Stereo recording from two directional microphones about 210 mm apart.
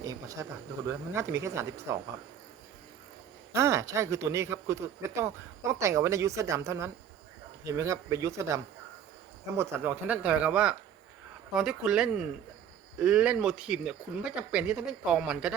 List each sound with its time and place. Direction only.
0.0 s speech: 15° right (ahead or behind)
3.5 s speech: 15° right (ahead or behind)